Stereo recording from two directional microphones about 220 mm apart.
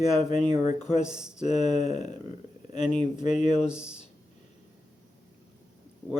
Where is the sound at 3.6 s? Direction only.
5° right (ahead or behind).